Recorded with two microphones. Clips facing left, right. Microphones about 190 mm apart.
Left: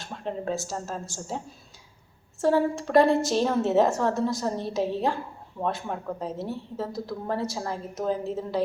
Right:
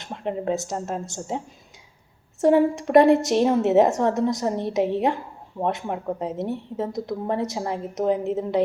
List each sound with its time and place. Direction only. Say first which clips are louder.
0.0 s a woman's voice: right 4 dB; 20° right (ahead or behind)
2.4 s a woman's voice: right 5 dB; 20° right (ahead or behind)